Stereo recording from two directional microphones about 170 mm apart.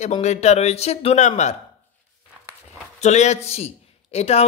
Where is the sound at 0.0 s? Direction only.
40° left (ahead or behind).